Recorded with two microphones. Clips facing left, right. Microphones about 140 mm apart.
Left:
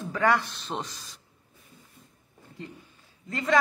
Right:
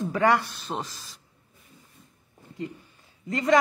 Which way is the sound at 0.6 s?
Centre (ahead or behind).